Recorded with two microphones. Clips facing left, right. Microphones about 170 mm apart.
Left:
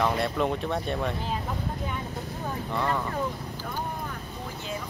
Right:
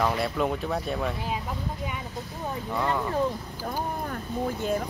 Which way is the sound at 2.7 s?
10° right (ahead or behind).